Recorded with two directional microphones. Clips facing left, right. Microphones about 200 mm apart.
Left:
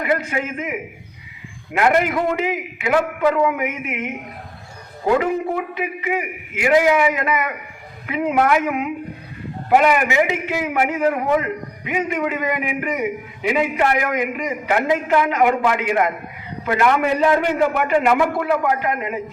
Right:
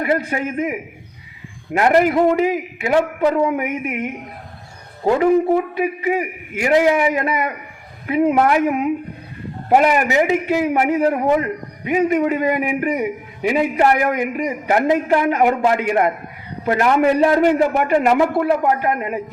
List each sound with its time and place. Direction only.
0.0 s a man's voice: 35° right (ahead or behind)
5.8 s a man's voice: 40° right (ahead or behind)